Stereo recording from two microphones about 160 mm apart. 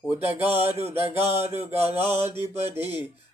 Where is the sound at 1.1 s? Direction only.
40° right (ahead or behind).